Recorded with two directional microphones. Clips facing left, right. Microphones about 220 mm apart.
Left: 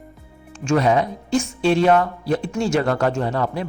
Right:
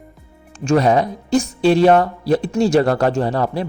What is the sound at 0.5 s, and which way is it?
Speech, 35° right (ahead or behind).